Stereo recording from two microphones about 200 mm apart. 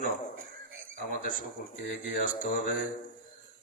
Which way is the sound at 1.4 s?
40° left (ahead or behind).